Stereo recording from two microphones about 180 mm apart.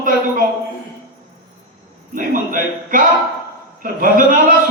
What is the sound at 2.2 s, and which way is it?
A man's voice, 50° right (ahead or behind).